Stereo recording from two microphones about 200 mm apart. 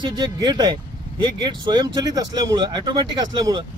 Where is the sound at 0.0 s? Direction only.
20° right (ahead or behind).